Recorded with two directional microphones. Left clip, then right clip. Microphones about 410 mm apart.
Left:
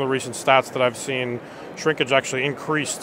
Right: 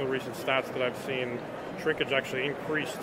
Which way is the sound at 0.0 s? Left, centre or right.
Left.